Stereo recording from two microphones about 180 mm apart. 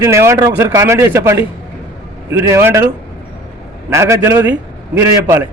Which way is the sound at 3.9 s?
15° right (ahead or behind).